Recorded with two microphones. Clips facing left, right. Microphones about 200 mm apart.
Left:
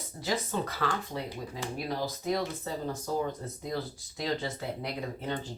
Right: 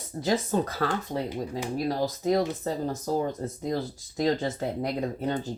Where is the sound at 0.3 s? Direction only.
45° right (ahead or behind).